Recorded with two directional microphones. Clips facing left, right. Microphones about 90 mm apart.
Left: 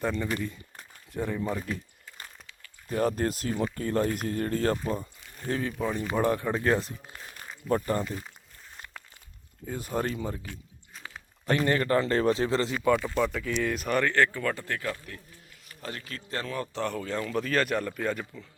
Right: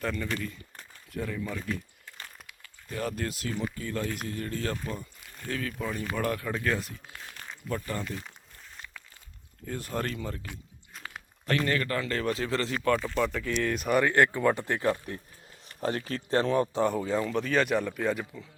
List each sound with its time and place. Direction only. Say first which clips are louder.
0.0 s speech: left 3 dB; 20° left (ahead or behind)
2.9 s speech: left 6 dB; 35° left (ahead or behind)
5.4 s speech: left 4 dB; 25° left (ahead or behind)
7.3 s a sound: even; 5° left (ahead or behind)
7.9 s speech: left 5 dB; 20° left (ahead or behind)
9.6 s speech: left 2 dB; 15° left (ahead or behind)
11.4 s speech: left 3 dB; 20° left (ahead or behind)
12.7 s speech: left 2 dB; 10° left (ahead or behind)